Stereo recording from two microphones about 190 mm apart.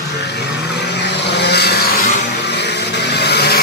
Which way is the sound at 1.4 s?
60° left (ahead or behind).